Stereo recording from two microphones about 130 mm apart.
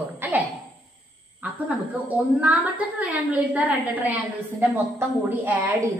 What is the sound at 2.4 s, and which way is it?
A woman's voice, 10° right (ahead or behind).